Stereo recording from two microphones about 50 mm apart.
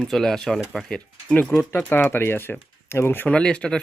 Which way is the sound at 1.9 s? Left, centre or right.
Left.